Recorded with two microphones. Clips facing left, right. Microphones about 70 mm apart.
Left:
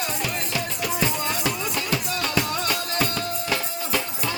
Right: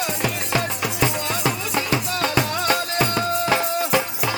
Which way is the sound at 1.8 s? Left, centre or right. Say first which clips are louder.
Right 4 dB; right.